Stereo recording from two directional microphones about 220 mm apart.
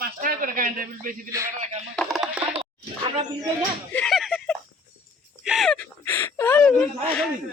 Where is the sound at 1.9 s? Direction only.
Centre (ahead or behind).